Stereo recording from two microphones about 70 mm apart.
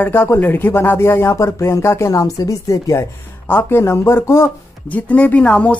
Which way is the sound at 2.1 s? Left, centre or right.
Left.